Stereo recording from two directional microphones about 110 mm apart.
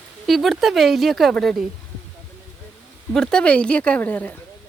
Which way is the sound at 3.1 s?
5° left (ahead or behind).